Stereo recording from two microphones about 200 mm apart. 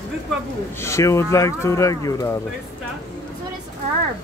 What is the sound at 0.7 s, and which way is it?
Speech, 15° left (ahead or behind).